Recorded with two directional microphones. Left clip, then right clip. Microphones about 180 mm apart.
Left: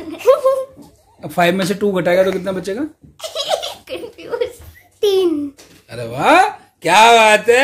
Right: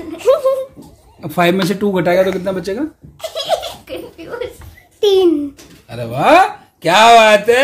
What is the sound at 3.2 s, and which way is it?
Laughter, 45° left (ahead or behind).